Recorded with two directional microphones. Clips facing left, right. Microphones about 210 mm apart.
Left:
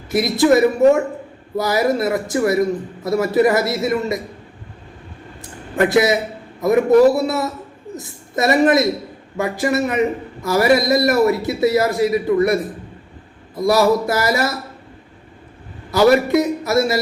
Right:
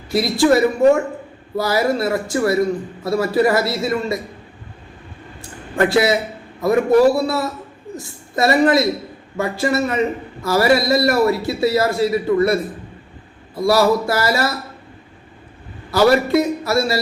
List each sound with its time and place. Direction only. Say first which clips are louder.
0.1 s a man's voice: left 1 dB; 20° left (ahead or behind)
5.4 s a sound: even; 20° left (ahead or behind)
6.6 s a man's voice: left 1 dB; 20° left (ahead or behind)
13.6 s a man's voice: even; 20° left (ahead or behind)
15.9 s a man's voice: left 1 dB; 20° left (ahead or behind)